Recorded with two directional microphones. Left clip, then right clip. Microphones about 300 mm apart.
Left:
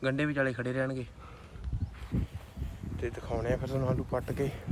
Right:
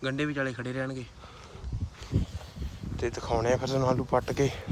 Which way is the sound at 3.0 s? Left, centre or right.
Centre.